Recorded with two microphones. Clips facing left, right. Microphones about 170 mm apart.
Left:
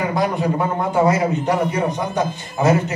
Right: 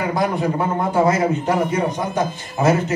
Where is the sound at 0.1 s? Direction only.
20° left (ahead or behind).